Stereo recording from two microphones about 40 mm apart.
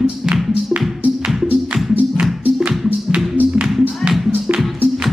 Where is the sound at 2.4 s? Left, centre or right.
Right.